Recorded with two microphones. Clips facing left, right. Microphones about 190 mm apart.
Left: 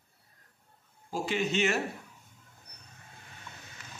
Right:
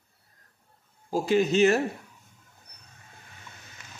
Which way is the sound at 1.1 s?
40° right (ahead or behind).